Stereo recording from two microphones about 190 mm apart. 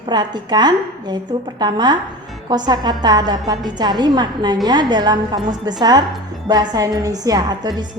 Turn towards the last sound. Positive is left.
turn(degrees=-20)  # may be behind; listen again after turning